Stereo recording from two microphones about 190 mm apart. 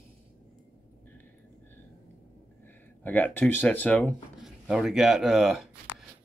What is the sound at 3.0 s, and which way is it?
Speech, 10° left (ahead or behind).